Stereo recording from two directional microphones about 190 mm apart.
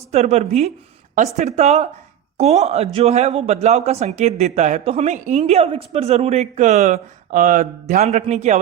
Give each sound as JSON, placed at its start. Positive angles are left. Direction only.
{"t": 0.1, "sound": "speech", "side_deg": -35}